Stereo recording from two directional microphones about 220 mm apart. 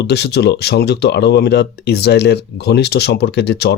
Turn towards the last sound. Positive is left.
turn(degrees=50)  # may be behind; listen again after turning